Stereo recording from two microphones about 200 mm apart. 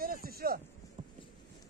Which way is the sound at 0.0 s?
45° right (ahead or behind).